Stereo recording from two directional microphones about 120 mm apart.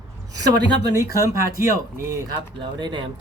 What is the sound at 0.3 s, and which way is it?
Speech, 30° right (ahead or behind).